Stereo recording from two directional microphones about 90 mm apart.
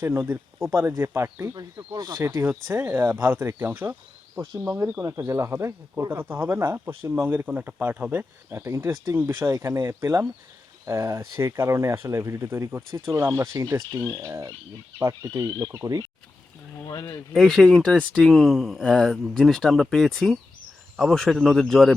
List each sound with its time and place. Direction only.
0.0 s speech: 25° right (ahead or behind)
16.9 s speech: 35° left (ahead or behind)
17.3 s speech: 5° left (ahead or behind)